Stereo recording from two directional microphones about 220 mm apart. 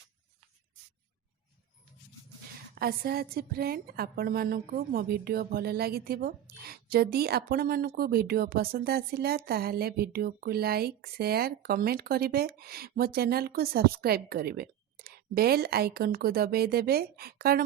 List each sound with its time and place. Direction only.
2.7 s a woman's voice: 45° right (ahead or behind)